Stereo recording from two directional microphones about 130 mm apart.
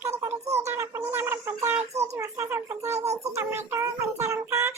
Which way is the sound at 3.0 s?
55° right (ahead or behind).